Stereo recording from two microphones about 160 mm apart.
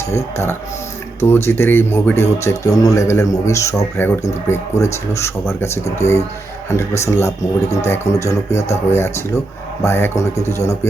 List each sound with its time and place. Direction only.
1.2 s speech: 15° left (ahead or behind)
8.6 s speech: 40° left (ahead or behind)
9.0 s speech: 15° left (ahead or behind)